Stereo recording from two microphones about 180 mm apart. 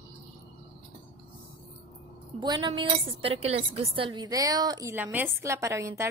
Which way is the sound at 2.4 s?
25° right (ahead or behind).